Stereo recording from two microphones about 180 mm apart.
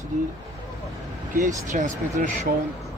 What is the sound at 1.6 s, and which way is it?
Speech, 45° right (ahead or behind).